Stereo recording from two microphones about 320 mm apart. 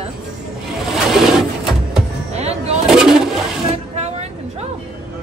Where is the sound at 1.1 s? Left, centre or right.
Centre.